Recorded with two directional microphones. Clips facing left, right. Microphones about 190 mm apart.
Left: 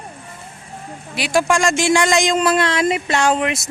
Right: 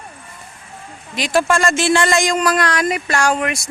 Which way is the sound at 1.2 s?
10° left (ahead or behind).